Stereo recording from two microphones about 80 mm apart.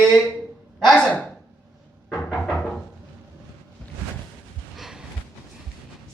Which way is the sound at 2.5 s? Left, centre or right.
Centre.